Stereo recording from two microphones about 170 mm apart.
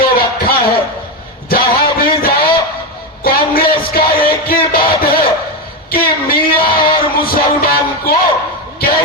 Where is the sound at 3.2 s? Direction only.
60° left (ahead or behind).